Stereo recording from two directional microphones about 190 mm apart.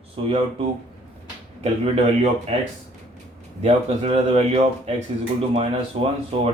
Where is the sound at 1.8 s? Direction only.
30° right (ahead or behind).